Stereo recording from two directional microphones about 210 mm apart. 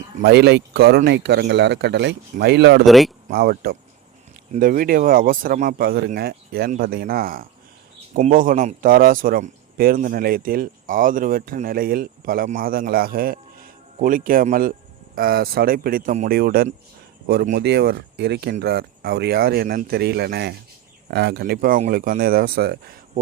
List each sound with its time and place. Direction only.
0.2 s a man's voice: 55° right (ahead or behind)
2.8 s speech: centre (ahead or behind)
3.2 s a man's voice: 45° right (ahead or behind)